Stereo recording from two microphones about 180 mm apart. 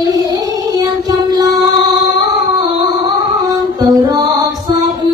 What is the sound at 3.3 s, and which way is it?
Music, 20° right (ahead or behind).